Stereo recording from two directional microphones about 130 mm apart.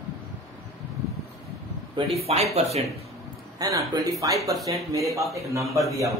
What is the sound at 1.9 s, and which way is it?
Speech, 50° right (ahead or behind).